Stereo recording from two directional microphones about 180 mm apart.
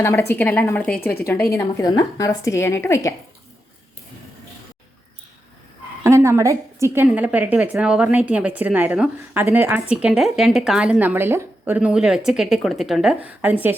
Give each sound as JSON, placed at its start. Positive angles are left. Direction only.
{"t": 0.0, "sound": "a woman's voice", "side_deg": 15}
{"t": 6.0, "sound": "a woman's voice", "side_deg": -15}